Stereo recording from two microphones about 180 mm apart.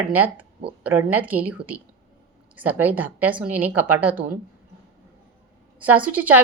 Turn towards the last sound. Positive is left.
turn(degrees=-10)  # may be behind; listen again after turning